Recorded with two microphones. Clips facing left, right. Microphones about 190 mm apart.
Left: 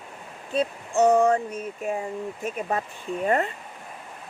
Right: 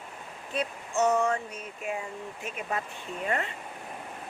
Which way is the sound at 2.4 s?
40° left (ahead or behind).